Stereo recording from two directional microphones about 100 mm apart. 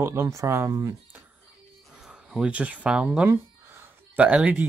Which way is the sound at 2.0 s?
10° right (ahead or behind).